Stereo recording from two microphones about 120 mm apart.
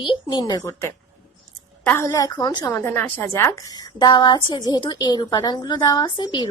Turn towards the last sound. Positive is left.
turn(degrees=35)  # may be behind; listen again after turning